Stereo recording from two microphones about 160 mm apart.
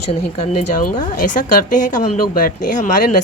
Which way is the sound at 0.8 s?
55° left (ahead or behind).